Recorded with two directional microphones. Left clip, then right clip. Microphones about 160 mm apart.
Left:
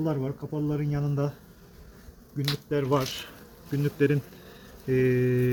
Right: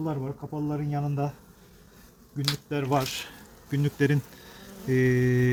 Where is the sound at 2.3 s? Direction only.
45° right (ahead or behind).